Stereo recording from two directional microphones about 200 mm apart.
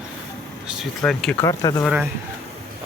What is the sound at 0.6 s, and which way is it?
Speech, 5° right (ahead or behind).